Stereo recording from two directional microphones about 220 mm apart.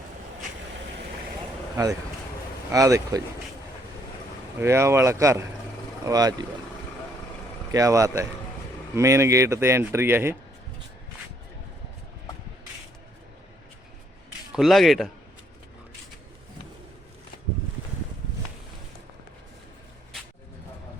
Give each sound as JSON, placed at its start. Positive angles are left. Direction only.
{"t": 1.7, "sound": "speech", "side_deg": -15}
{"t": 4.6, "sound": "speech", "side_deg": -10}
{"t": 7.7, "sound": "speech", "side_deg": -15}
{"t": 14.5, "sound": "speech", "side_deg": 0}